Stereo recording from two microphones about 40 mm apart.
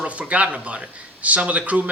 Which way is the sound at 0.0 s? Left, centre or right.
Right.